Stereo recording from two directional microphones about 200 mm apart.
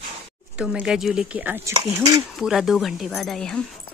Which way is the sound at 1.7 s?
20° right (ahead or behind).